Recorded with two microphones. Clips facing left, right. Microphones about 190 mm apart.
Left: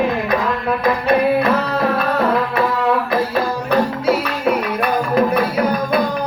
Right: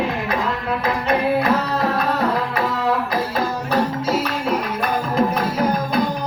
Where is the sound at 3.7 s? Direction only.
60° left (ahead or behind).